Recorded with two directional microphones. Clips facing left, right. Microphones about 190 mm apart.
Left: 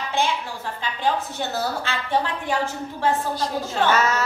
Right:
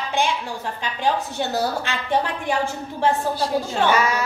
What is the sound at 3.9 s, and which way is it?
Speech, 10° right (ahead or behind).